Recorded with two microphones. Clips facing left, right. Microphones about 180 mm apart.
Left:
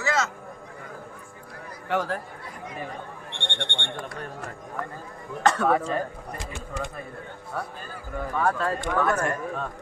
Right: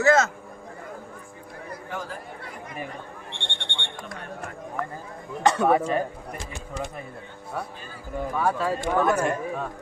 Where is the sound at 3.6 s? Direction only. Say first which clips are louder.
Left 5 dB; 55° left (ahead or behind).